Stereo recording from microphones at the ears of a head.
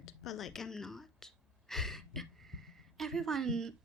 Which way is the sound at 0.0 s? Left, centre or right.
Left.